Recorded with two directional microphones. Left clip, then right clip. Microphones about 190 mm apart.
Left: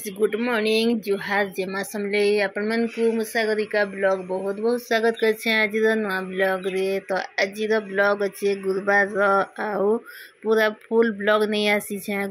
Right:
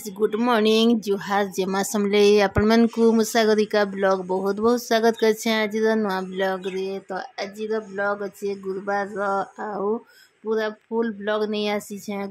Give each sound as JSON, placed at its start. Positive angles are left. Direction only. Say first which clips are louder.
{"t": 0.4, "sound": "speech", "louder": "right 6 dB", "side_deg": -45}
{"t": 1.1, "sound": "speech", "louder": "even", "side_deg": -30}
{"t": 1.7, "sound": "speech", "louder": "right 3 dB", "side_deg": -45}
{"t": 4.9, "sound": "speech", "louder": "left 1 dB", "side_deg": -35}